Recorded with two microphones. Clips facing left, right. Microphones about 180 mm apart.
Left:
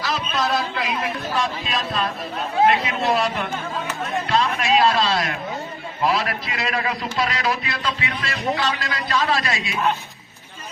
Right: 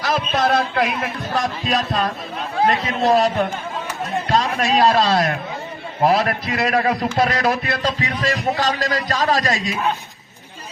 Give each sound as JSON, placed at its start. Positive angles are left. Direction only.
{"t": 0.0, "sound": "speech", "side_deg": -50}
{"t": 1.3, "sound": "music", "side_deg": -40}
{"t": 4.3, "sound": "a man's voice", "side_deg": -40}